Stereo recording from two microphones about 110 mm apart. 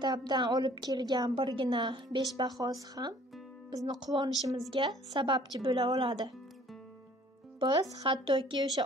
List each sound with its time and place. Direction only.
0.0 s a woman's voice: 40° right (ahead or behind)
7.6 s a woman's voice: 35° right (ahead or behind)
8.0 s speech: 50° right (ahead or behind)